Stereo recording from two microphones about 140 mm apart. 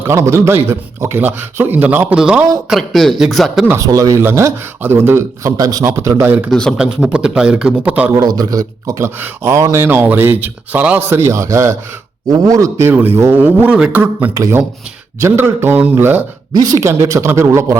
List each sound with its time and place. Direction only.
0.0 s a man's voice: 20° right (ahead or behind); by 3.7 s centre (ahead or behind)
3.7 s speech: 25° right (ahead or behind)
6.5 s speech: 5° left (ahead or behind)
6.7 s a man's voice: 5° right (ahead or behind)
8.1 s a man's voice: 30° right (ahead or behind)
12.9 s a man's voice: 15° right (ahead or behind)
14.3 s a man's voice: 25° right (ahead or behind)
16.5 s speech: 25° right (ahead or behind)